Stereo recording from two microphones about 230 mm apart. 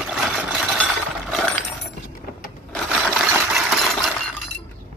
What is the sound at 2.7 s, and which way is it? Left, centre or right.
Coin, centre.